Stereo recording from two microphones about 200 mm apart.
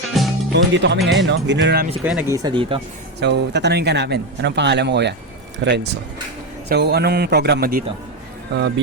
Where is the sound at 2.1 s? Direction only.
10° right (ahead or behind).